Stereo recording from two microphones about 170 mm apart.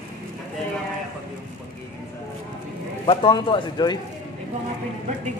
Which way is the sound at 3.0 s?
30° left (ahead or behind).